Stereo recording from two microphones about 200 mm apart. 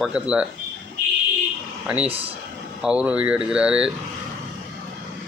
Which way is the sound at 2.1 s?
30° right (ahead or behind).